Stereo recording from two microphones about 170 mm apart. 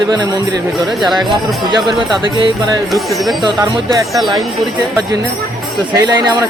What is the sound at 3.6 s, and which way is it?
Speech, 25° right (ahead or behind).